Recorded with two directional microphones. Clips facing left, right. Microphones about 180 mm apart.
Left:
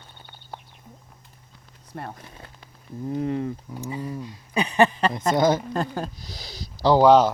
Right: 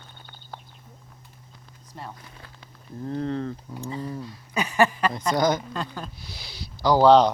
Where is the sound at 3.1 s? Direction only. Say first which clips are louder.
Left 2 dB; 15° left (ahead or behind); by 5.6 s 30° left (ahead or behind).